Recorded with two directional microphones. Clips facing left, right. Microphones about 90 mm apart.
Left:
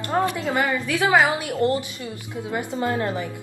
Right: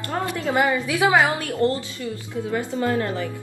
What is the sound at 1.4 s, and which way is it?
A woman's voice, 20° left (ahead or behind).